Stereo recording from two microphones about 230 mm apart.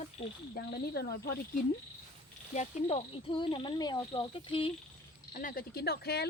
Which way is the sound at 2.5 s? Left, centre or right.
Left.